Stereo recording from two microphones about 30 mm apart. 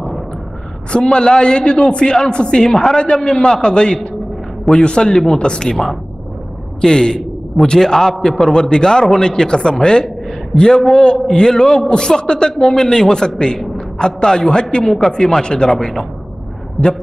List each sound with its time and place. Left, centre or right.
0.9 s a man's voice: left
2.7 s a man's voice: centre
3.4 s a man's voice: left
6.8 s a man's voice: left
12.5 s a man's voice: centre
15.8 s a man's voice: centre
16.8 s a man's voice: centre